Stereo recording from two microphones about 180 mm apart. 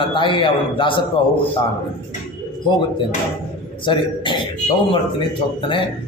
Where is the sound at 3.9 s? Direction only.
25° left (ahead or behind).